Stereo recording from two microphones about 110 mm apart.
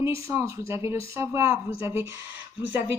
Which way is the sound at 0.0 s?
25° right (ahead or behind).